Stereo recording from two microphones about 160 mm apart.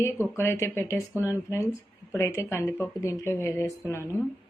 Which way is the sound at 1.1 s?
15° right (ahead or behind).